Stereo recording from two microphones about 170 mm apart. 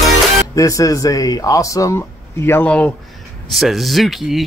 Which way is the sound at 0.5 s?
20° left (ahead or behind).